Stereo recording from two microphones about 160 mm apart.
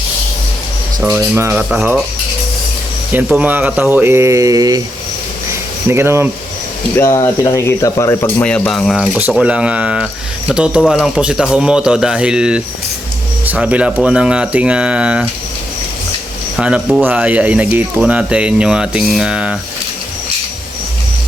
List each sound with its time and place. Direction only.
1.2 s speech: 15° right (ahead or behind)
1.7 s speech: 5° right (ahead or behind)
3.1 s speech: 10° right (ahead or behind); by 4.8 s 25° right (ahead or behind)
5.9 s speech: 15° right (ahead or behind)
6.9 s speech: 20° left (ahead or behind); by 15.3 s 5° right (ahead or behind)
16.6 s speech: 5° right (ahead or behind)